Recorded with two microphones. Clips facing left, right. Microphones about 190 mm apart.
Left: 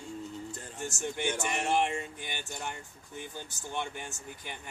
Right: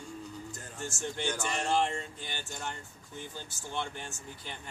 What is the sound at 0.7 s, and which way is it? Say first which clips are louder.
Speech: left 1 dB; 15° left (ahead or behind).